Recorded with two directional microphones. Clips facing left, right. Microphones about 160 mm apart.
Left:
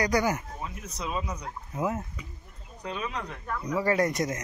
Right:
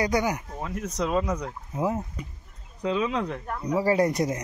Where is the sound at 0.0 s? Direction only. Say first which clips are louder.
Right 1 dB; 20° right (ahead or behind).